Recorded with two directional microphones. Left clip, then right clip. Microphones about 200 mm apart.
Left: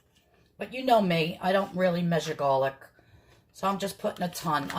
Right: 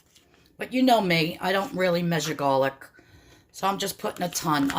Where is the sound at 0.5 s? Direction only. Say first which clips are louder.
Right 2 dB; 45° right (ahead or behind).